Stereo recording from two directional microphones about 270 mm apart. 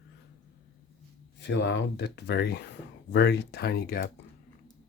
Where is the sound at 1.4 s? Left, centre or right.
Left.